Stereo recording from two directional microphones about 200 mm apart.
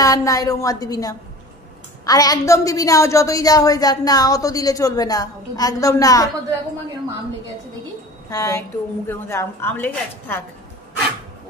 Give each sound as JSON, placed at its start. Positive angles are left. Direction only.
{"t": 0.0, "sound": "a woman's voice", "side_deg": 15}
{"t": 8.3, "sound": "a woman's voice", "side_deg": 15}